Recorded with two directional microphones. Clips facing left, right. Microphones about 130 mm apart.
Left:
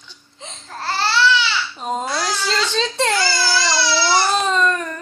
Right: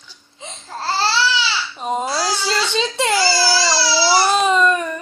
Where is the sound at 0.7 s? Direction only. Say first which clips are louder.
Right 2 dB; 30° right (ahead or behind).